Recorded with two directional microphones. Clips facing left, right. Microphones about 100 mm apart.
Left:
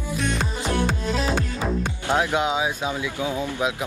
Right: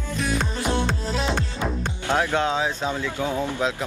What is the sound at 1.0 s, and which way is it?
Music, 35° right (ahead or behind).